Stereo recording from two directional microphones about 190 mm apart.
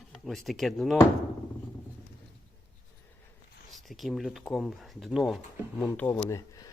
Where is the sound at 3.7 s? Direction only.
Centre (ahead or behind).